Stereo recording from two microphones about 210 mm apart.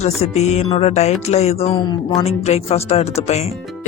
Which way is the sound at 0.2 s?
30° left (ahead or behind).